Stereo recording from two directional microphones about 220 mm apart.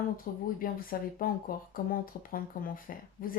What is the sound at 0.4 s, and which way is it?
Speech, 40° left (ahead or behind).